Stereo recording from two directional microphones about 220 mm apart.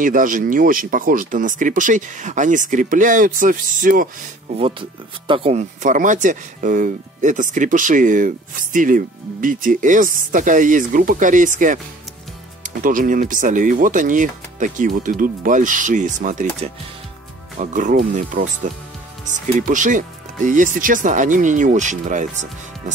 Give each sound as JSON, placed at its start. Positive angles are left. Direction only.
{"t": 0.0, "sound": "speech", "side_deg": -35}
{"t": 4.6, "sound": "speech", "side_deg": -25}